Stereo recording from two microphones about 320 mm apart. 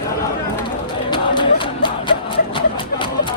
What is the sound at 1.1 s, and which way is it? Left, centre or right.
Music, centre.